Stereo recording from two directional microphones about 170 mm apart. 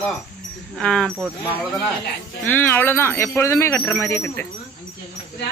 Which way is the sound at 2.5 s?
10° left (ahead or behind).